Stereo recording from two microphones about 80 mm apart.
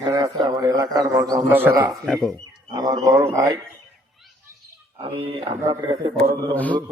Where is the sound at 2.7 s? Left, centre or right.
Right.